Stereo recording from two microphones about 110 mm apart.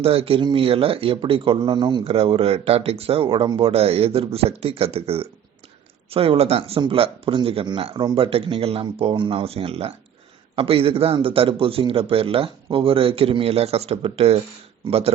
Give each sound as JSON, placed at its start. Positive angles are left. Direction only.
{"t": 0.0, "sound": "speech", "side_deg": -60}
{"t": 2.0, "sound": "speech", "side_deg": -60}
{"t": 3.7, "sound": "speech", "side_deg": -65}